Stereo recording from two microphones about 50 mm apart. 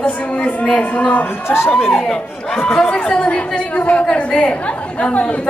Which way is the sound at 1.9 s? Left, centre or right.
Centre.